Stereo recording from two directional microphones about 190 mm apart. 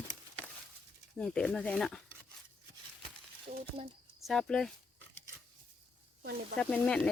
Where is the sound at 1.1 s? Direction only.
5° left (ahead or behind).